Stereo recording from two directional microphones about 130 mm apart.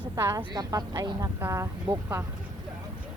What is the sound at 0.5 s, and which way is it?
Speech, 30° right (ahead or behind).